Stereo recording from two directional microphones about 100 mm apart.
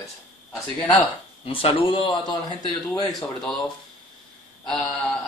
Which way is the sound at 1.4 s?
65° left (ahead or behind).